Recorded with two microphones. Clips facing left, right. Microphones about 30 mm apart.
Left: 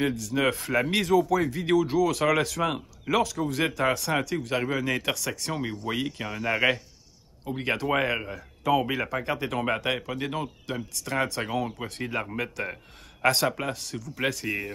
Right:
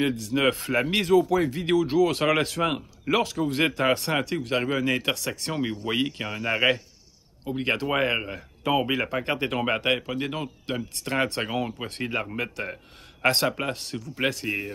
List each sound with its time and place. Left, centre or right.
0.0 s speech: right
10.7 s speech: right
14.2 s speech: centre